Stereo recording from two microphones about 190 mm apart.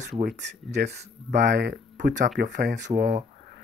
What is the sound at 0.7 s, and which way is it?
Speech, 60° right (ahead or behind).